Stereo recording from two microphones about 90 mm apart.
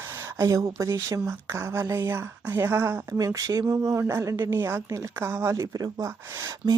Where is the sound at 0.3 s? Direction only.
40° right (ahead or behind); by 3.0 s 25° right (ahead or behind).